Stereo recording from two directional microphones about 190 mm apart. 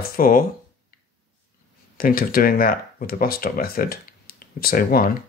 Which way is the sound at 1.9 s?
50° left (ahead or behind).